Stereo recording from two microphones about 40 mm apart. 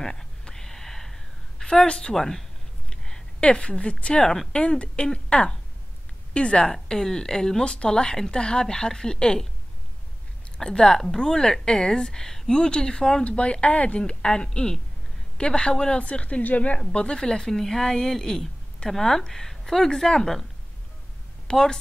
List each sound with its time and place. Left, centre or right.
0.0 s a sound: centre
1.8 s speech: left
2.1 s a woman's voice: centre
2.9 s a sound: centre
3.4 s speech: left
6.7 s a woman's voice: centre
10.6 s a woman's voice: centre
16.0 s speech: left
16.7 s a woman's voice: left
21.5 s speech: centre